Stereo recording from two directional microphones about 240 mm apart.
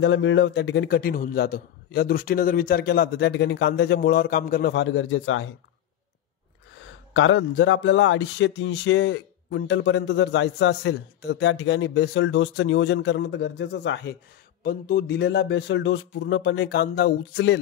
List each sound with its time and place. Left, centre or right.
0.0 s a man's voice: left
4.8 s a man's voice: left
7.2 s speech: left